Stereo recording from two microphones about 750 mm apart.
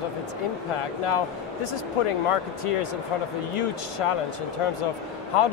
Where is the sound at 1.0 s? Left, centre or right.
Left.